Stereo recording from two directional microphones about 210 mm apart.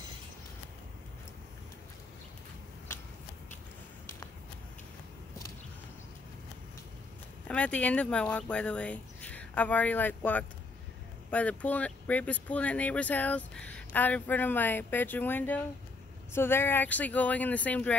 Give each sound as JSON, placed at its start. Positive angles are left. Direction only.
{"t": 2.9, "sound": "shuffling cards", "side_deg": 10}
{"t": 7.4, "sound": "speech", "side_deg": 5}